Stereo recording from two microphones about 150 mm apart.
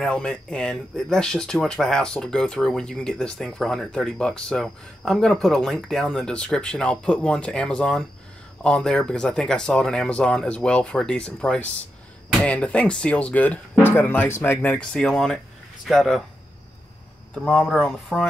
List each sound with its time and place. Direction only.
0.0 s speech: 5° left (ahead or behind)
17.4 s speech: 5° left (ahead or behind)